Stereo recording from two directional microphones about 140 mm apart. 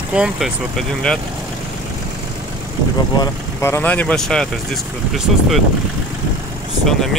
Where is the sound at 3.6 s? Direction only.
15° left (ahead or behind).